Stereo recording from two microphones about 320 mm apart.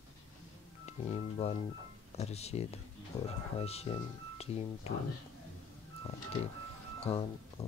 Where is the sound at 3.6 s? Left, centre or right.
Centre.